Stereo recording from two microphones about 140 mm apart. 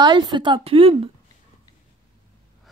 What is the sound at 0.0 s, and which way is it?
A woman's voice, 30° right (ahead or behind).